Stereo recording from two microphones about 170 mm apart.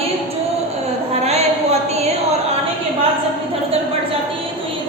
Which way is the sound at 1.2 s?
40° right (ahead or behind).